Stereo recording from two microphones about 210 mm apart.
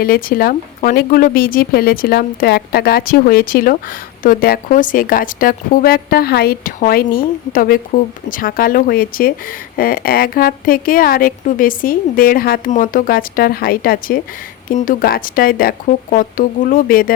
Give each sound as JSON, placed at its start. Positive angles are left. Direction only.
{"t": 0.0, "sound": "speech", "side_deg": 45}